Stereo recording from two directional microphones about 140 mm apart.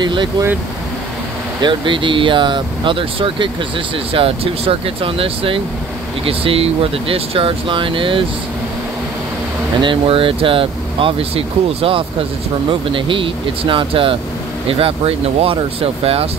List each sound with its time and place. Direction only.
0.0 s speech: 35° right (ahead or behind)
1.6 s speech: 35° right (ahead or behind)
9.8 s speech: 40° right (ahead or behind)